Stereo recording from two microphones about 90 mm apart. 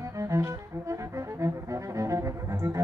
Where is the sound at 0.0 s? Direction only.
35° right (ahead or behind).